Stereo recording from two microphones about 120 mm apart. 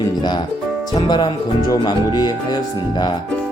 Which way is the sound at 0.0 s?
35° left (ahead or behind).